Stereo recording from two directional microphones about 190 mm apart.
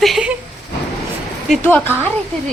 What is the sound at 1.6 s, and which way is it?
Speech, 10° left (ahead or behind).